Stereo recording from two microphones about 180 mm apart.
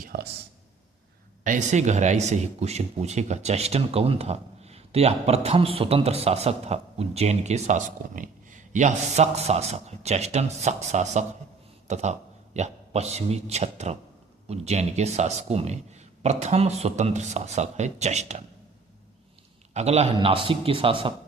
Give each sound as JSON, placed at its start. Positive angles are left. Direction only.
{"t": 0.0, "sound": "a sound", "side_deg": -55}
{"t": 1.5, "sound": "speech", "side_deg": -40}
{"t": 19.7, "sound": "a man's voice", "side_deg": -35}